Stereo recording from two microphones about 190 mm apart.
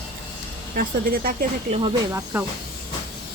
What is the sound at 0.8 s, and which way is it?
Speech, 50° right (ahead or behind).